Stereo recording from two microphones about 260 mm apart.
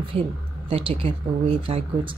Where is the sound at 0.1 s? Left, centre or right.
Right.